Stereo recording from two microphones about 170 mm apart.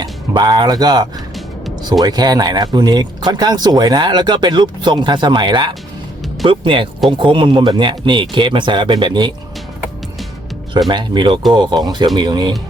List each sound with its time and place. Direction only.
0.0 s speech: 25° right (ahead or behind)
10.8 s speech: 25° right (ahead or behind)